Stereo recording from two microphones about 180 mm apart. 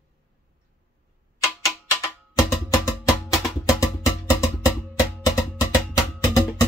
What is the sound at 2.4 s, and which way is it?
Music, 15° left (ahead or behind).